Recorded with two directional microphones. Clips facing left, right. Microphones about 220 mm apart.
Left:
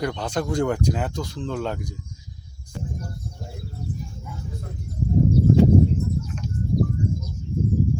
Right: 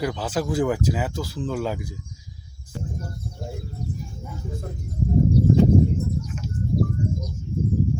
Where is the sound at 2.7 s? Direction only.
5° right (ahead or behind).